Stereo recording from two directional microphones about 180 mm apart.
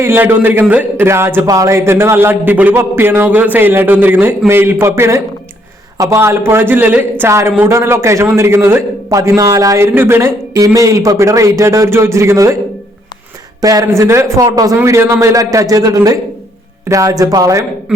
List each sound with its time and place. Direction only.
0.0 s speech: 15° right (ahead or behind)
13.6 s speech: 20° right (ahead or behind)